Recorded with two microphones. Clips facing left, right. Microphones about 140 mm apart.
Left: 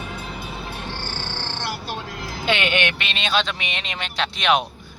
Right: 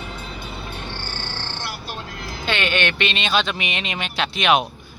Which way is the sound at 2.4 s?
15° left (ahead or behind).